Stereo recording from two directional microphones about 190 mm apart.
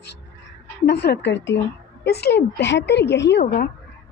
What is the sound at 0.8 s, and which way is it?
Speech, 60° left (ahead or behind).